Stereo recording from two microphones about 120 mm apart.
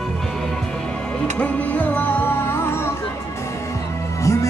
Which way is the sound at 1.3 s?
10° left (ahead or behind).